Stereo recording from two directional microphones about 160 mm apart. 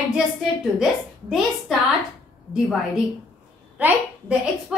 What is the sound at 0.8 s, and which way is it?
Speech, 5° right (ahead or behind).